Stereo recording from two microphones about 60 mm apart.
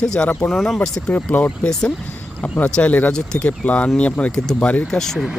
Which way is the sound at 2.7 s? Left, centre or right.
Centre.